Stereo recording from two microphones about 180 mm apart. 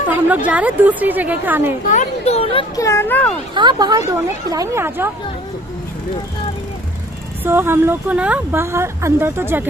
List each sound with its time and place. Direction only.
0.1 s speech: 10° right (ahead or behind)
1.9 s speech: 40° left (ahead or behind)
2.7 s speech: 15° left (ahead or behind)
3.5 s speech: 25° right (ahead or behind)
7.4 s speech: 10° right (ahead or behind)